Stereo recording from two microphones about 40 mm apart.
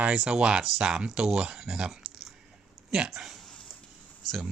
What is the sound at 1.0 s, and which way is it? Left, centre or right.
Speech, right.